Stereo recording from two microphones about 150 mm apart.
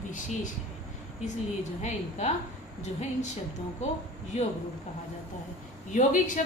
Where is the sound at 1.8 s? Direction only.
50° left (ahead or behind).